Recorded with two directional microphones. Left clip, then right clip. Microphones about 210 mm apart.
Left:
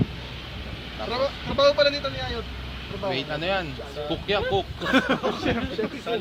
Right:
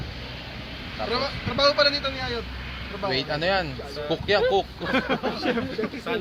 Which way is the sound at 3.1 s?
45° right (ahead or behind).